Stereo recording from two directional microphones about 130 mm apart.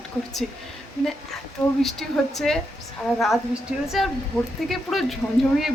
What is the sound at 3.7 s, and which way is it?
Speech, 5° right (ahead or behind).